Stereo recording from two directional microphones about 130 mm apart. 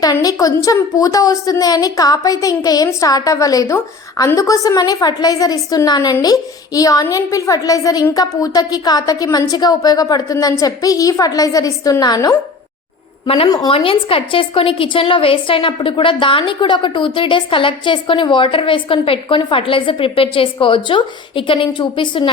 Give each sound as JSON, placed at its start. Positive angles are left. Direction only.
{"t": 0.0, "sound": "a woman's voice", "side_deg": 30}
{"t": 13.2, "sound": "a woman's voice", "side_deg": 45}